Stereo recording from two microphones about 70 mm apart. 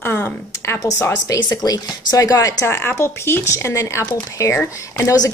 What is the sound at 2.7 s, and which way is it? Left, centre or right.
Speech, left.